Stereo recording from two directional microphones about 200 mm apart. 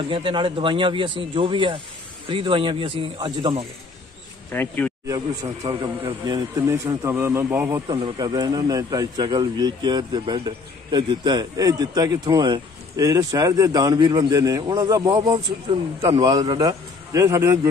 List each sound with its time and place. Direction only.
0.1 s speech: 25° right (ahead or behind)
4.5 s speech: 10° left (ahead or behind)
5.0 s a man's voice: 15° right (ahead or behind)